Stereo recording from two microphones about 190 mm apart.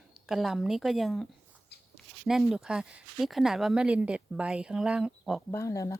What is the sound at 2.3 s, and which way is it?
Speech, centre (ahead or behind).